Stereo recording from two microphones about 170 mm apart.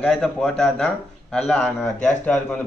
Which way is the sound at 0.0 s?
Centre (ahead or behind).